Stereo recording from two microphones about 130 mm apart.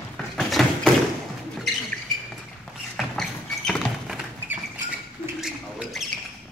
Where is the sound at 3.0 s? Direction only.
Centre (ahead or behind).